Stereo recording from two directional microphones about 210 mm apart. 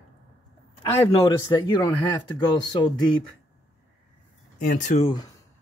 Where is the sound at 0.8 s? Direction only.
20° left (ahead or behind).